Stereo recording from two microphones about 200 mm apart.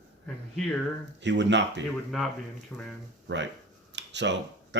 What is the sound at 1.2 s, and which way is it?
Speech, 60° right (ahead or behind).